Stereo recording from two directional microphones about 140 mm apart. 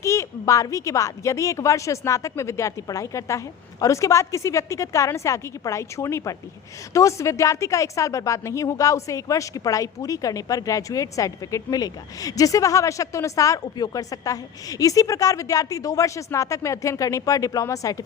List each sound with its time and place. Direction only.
0.0 s a woman's voice: 20° left (ahead or behind)